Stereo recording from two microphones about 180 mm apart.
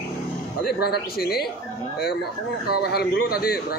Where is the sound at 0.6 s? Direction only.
60° left (ahead or behind).